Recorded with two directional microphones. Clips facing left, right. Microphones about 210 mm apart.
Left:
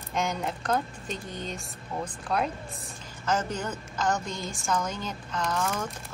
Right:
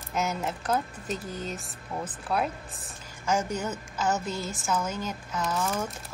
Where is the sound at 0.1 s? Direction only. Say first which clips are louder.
Even; 5° right (ahead or behind).